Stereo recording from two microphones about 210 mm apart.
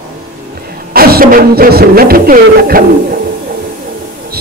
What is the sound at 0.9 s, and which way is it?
A man's voice, 45° right (ahead or behind).